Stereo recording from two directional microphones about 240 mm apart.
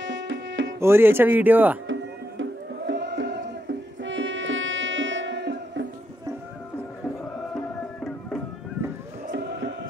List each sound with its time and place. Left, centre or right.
0.0 s music: right
0.7 s speech: centre
2.9 s chant: right
4.0 s music: right
7.5 s music: centre
9.3 s a sound: right